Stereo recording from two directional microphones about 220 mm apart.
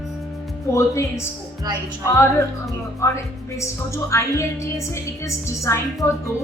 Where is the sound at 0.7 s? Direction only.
15° left (ahead or behind).